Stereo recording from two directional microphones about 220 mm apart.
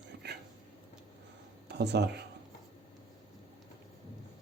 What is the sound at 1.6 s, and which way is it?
Speech, 50° right (ahead or behind).